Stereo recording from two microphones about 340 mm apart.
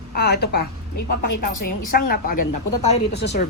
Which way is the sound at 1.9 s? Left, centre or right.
Left.